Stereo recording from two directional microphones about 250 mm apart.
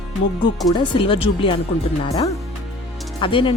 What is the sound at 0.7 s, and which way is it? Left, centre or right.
Speech, centre.